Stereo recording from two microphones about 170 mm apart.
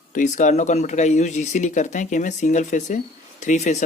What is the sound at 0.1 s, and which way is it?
Speech, 50° left (ahead or behind).